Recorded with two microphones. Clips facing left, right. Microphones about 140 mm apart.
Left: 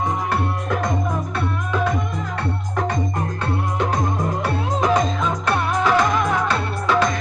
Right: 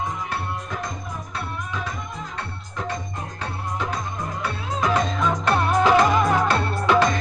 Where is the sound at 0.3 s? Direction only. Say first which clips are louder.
Left 7 dB; 65° left (ahead or behind).